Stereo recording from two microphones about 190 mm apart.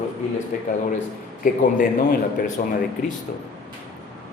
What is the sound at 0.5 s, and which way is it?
Speech, 40° left (ahead or behind).